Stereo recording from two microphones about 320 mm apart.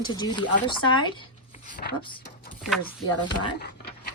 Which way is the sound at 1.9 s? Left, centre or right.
Centre.